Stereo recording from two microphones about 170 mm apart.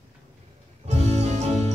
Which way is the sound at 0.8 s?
40° right (ahead or behind).